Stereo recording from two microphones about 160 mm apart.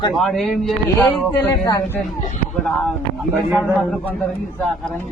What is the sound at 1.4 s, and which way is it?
Speech, 20° left (ahead or behind).